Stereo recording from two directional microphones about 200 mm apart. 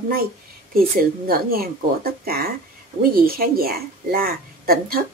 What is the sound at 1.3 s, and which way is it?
A woman's voice, 50° right (ahead or behind).